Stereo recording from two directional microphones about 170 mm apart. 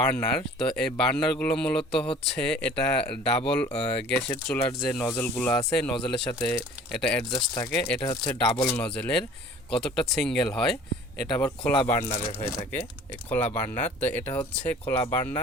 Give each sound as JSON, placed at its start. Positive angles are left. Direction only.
{"t": 0.0, "sound": "speech", "side_deg": 10}
{"t": 7.3, "sound": "speech", "side_deg": 20}
{"t": 7.7, "sound": "speech", "side_deg": 5}